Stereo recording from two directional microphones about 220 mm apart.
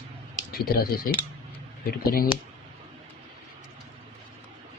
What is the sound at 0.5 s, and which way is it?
Speech, 40° left (ahead or behind).